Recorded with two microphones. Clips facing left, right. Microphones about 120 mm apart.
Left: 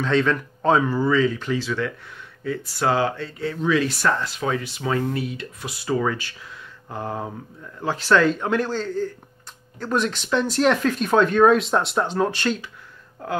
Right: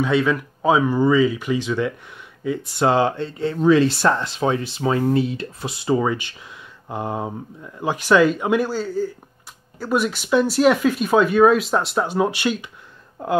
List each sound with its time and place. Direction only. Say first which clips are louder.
0.0 s speech: right 2 dB; 10° right (ahead or behind)